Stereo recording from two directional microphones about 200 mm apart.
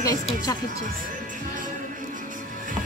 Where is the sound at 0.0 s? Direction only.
15° left (ahead or behind).